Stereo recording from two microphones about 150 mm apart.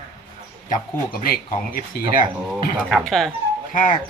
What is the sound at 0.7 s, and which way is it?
Speech, 75° left (ahead or behind).